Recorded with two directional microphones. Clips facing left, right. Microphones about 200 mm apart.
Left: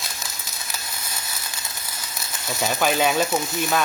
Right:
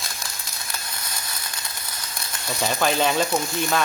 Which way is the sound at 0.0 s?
Centre (ahead or behind).